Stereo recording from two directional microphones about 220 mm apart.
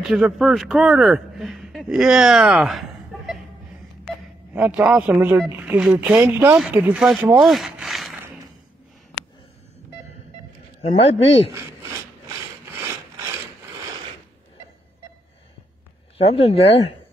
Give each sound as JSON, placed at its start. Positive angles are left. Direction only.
{"t": 0.1, "sound": "speech", "side_deg": 0}
{"t": 4.6, "sound": "speech", "side_deg": -5}
{"t": 10.8, "sound": "speech", "side_deg": 25}
{"t": 16.2, "sound": "speech", "side_deg": 25}